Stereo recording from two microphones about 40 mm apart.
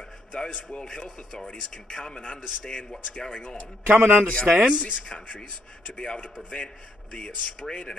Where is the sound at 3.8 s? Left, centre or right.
Right.